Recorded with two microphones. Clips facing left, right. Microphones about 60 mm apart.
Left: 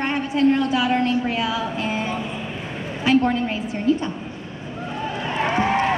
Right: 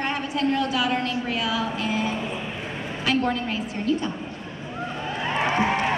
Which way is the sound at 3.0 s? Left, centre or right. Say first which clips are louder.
Left 6 dB; left.